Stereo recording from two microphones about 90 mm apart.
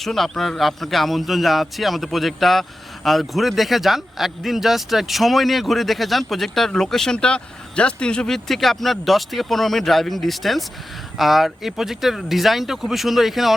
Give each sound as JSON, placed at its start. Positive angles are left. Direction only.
{"t": 0.0, "sound": "a man's voice", "side_deg": 5}